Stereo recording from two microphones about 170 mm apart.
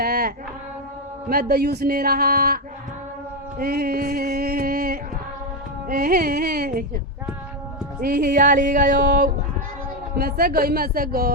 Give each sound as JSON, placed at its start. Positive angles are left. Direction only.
{"t": 0.0, "sound": "a sound", "side_deg": -65}
{"t": 1.3, "sound": "speech", "side_deg": -65}
{"t": 3.6, "sound": "music", "side_deg": -65}
{"t": 5.9, "sound": "speech", "side_deg": -60}
{"t": 8.0, "sound": "music", "side_deg": -60}
{"t": 10.2, "sound": "speech", "side_deg": -65}